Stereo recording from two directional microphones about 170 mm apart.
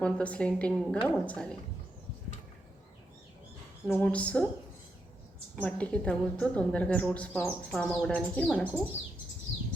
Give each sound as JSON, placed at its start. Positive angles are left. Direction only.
{"t": 0.0, "sound": "a woman's voice", "side_deg": 5}
{"t": 3.9, "sound": "a woman's voice", "side_deg": 10}
{"t": 5.5, "sound": "a woman's voice", "side_deg": 10}
{"t": 8.9, "sound": "bird", "side_deg": 40}